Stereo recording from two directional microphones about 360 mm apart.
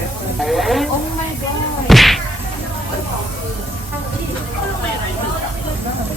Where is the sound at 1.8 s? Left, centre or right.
Centre.